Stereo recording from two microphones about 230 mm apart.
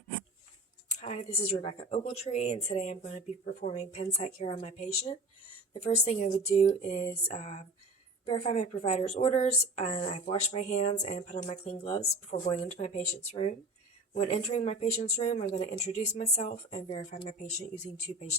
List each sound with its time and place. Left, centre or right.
0.9 s a woman's voice: left